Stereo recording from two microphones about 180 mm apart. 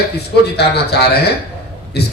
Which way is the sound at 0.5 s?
65° left (ahead or behind).